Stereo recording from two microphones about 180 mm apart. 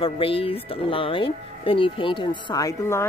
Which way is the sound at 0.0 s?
30° left (ahead or behind).